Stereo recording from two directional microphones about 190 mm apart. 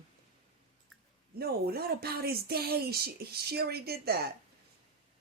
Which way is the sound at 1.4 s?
55° right (ahead or behind).